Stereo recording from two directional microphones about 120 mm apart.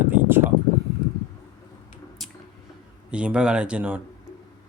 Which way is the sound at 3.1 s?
10° right (ahead or behind).